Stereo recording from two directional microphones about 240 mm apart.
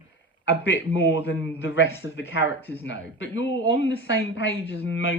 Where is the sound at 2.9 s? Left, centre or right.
Left.